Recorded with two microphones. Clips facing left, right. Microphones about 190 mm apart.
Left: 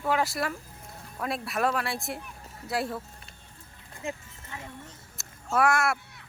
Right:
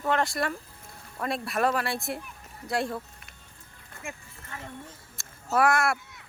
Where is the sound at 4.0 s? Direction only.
20° left (ahead or behind).